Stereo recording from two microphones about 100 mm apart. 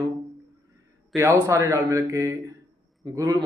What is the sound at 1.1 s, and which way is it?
Speech, 30° right (ahead or behind).